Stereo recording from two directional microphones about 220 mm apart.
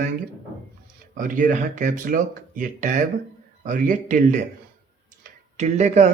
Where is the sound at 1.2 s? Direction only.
35° right (ahead or behind).